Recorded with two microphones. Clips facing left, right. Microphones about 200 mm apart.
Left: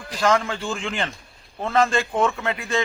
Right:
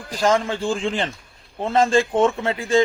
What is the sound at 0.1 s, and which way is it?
Speech, 35° right (ahead or behind).